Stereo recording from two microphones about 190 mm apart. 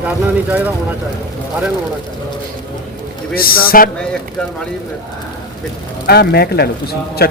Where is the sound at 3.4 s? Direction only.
50° left (ahead or behind).